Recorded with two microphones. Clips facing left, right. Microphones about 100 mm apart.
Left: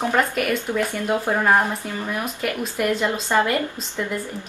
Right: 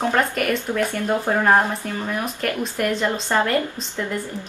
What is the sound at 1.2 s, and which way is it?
A woman's voice, centre (ahead or behind).